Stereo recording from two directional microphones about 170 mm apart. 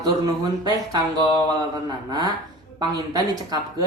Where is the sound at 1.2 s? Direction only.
30° left (ahead or behind).